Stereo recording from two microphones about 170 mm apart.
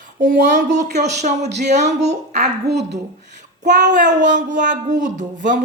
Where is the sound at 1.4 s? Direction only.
80° right.